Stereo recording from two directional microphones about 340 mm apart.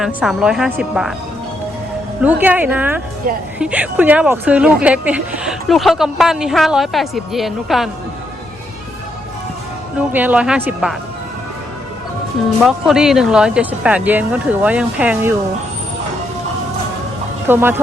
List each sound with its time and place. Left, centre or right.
0.0 s speech: centre
2.2 s speech: centre
3.3 s speech: right
3.6 s speech: centre
10.1 s speech: centre
12.6 s speech: centre
17.5 s speech: centre